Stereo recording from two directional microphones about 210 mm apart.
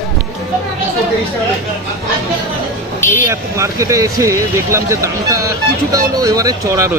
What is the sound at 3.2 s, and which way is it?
Speech, 15° right (ahead or behind).